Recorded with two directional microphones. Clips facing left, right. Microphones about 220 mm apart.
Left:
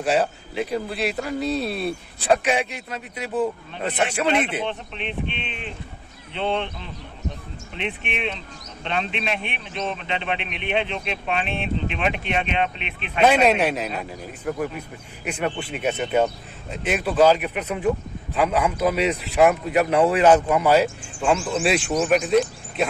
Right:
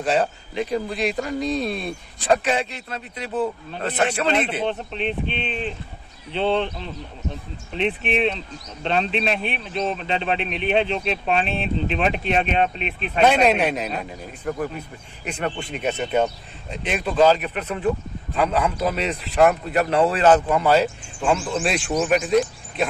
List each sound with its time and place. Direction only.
0.0 s speech: 10° left (ahead or behind)
4.6 s speech: 35° right (ahead or behind)
13.2 s speech: centre (ahead or behind)